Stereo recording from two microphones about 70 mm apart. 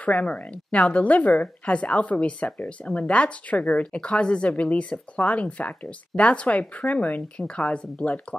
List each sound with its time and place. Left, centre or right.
0.0 s a woman's voice: centre